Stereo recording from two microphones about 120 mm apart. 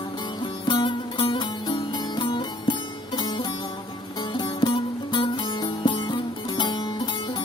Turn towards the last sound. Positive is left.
turn(degrees=40)  # may be behind; listen again after turning